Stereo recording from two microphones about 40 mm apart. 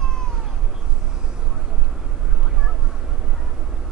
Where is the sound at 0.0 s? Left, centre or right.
Centre.